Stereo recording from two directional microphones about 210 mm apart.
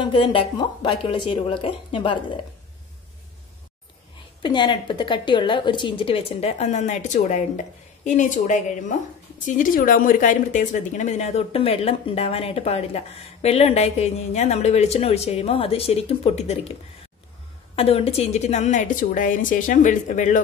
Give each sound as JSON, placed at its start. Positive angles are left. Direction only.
{"t": 0.0, "sound": "speech", "side_deg": 25}
{"t": 4.4, "sound": "speech", "side_deg": 20}
{"t": 17.7, "sound": "a woman's voice", "side_deg": 30}